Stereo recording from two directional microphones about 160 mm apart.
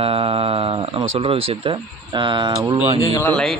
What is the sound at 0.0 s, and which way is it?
Speech, 35° right (ahead or behind).